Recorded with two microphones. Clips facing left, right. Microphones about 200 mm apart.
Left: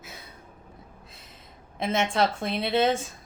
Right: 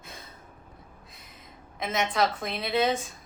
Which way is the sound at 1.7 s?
30° left (ahead or behind).